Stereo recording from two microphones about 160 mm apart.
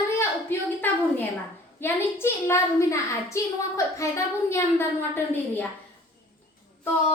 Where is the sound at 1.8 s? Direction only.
15° left (ahead or behind).